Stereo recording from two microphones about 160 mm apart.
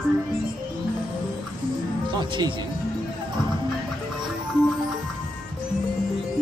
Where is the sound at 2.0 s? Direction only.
30° right (ahead or behind).